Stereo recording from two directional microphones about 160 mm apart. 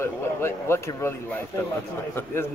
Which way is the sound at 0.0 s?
15° left (ahead or behind).